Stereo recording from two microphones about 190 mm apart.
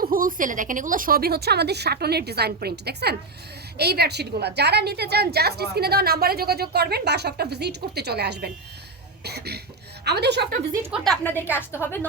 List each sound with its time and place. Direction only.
0.0 s a woman's voice: 50° right (ahead or behind)
10.9 s a woman's voice: centre (ahead or behind)